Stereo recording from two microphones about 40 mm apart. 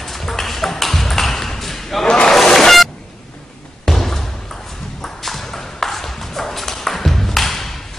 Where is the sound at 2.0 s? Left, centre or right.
Left.